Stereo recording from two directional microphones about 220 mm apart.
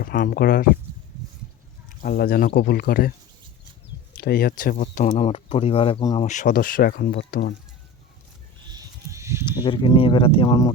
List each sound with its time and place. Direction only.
0.0 s speech: 40° left (ahead or behind)
2.0 s speech: 45° left (ahead or behind); by 6.2 s 20° left (ahead or behind)
6.2 s speech: 35° left (ahead or behind)
8.7 s a sound: 15° right (ahead or behind)
9.6 s speech: 20° left (ahead or behind)